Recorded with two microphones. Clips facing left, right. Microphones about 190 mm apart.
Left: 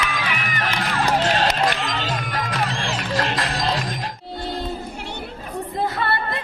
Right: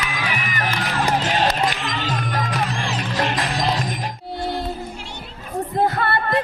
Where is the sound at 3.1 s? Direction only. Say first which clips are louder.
Right 1 dB; 15° right (ahead or behind).